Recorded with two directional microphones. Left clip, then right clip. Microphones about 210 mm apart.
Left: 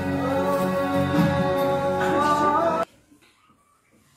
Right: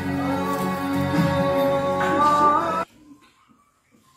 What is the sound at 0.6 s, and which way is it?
Music, 50° right (ahead or behind).